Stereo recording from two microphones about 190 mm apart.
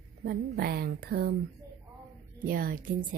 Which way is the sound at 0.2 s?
55° right (ahead or behind).